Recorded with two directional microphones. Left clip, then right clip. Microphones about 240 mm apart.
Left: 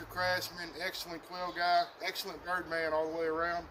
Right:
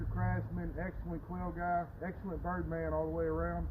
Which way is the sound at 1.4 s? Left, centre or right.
Left.